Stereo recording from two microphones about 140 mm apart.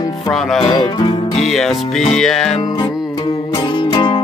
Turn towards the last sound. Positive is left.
turn(degrees=30)  # may be behind; listen again after turning